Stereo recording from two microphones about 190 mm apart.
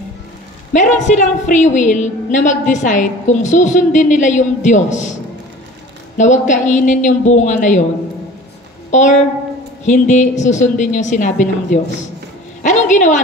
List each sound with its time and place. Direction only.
0.7 s a woman's voice: 40° left (ahead or behind)
6.1 s a woman's voice: 40° left (ahead or behind)
8.9 s a woman's voice: 40° left (ahead or behind)